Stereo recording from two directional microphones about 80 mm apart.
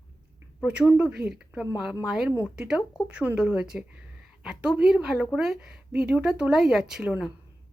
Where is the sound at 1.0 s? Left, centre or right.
Centre.